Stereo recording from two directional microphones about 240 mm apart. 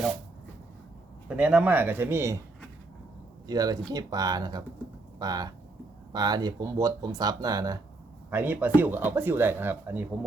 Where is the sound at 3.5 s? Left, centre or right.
Centre.